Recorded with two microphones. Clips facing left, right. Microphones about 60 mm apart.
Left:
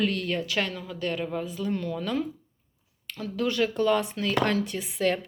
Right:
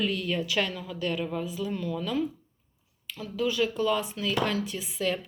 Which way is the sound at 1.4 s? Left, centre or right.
Left.